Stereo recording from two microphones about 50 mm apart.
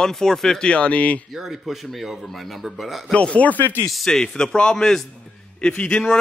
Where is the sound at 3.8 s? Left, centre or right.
Centre.